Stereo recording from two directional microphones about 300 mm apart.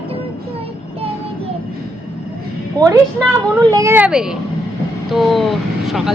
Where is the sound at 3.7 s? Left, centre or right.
Centre.